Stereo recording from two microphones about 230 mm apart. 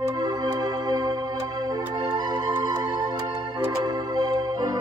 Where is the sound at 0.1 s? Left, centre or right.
Centre.